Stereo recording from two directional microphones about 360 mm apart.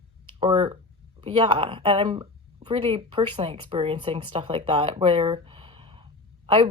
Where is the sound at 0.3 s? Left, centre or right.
Centre.